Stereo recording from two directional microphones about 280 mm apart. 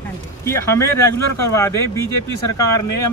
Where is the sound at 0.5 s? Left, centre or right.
Centre.